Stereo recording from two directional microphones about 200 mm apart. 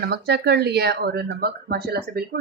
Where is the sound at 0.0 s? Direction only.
55° right (ahead or behind).